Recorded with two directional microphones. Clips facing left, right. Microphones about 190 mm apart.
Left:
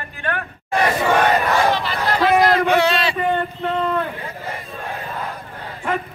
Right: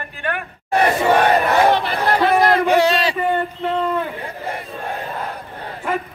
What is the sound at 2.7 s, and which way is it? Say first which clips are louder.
Speech: right 2 dB; 40° right (ahead or behind).